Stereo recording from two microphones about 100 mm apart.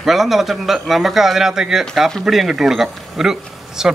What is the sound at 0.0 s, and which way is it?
A man's voice, 5° right (ahead or behind).